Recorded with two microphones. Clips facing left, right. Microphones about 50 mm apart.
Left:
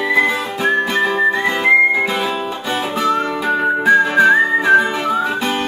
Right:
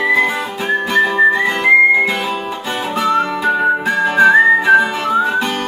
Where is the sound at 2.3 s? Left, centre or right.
Right.